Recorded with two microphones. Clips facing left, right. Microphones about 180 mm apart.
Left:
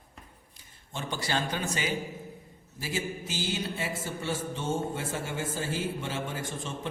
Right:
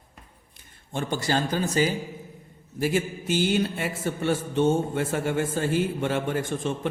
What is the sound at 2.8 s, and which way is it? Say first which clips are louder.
Music: right 8 dB; 60° right (ahead or behind).